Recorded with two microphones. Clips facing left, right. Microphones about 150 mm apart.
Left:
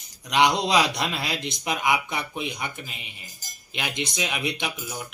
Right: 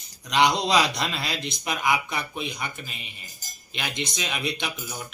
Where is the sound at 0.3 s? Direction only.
15° left (ahead or behind).